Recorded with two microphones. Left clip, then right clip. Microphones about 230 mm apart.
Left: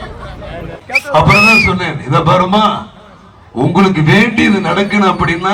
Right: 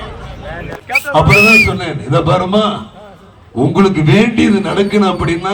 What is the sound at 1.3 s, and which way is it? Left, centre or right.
A man's voice, centre.